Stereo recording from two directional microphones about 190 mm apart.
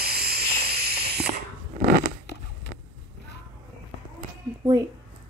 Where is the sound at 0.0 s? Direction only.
55° right (ahead or behind).